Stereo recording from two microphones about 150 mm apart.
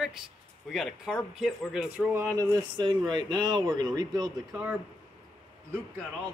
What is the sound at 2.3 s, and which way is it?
Speech, 25° right (ahead or behind).